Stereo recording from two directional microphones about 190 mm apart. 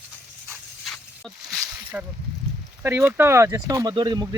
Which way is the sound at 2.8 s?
10° right (ahead or behind).